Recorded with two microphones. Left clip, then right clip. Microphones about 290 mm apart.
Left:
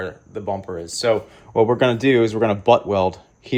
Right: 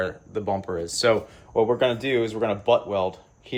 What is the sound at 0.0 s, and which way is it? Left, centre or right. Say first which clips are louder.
Speech: even; centre.